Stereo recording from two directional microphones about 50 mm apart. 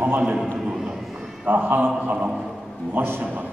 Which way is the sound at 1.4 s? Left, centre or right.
Right.